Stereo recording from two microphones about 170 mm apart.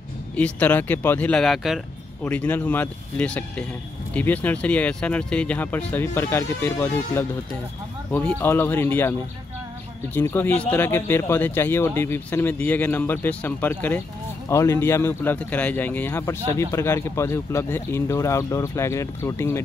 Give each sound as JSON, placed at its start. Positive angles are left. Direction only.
{"t": 0.4, "sound": "speech", "side_deg": 10}
{"t": 10.1, "sound": "speech", "side_deg": 10}